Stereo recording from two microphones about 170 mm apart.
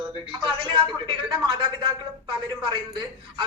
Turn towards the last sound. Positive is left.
turn(degrees=-25)  # may be behind; listen again after turning